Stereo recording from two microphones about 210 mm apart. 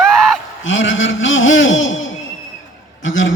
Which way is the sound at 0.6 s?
65° left (ahead or behind).